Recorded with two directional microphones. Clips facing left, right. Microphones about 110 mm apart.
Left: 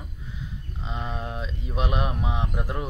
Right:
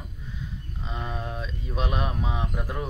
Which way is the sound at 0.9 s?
15° left (ahead or behind).